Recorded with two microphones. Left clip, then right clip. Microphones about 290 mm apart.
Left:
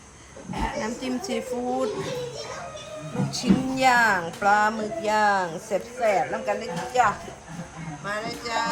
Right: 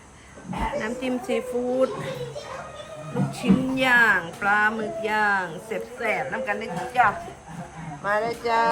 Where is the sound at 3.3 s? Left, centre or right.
Centre.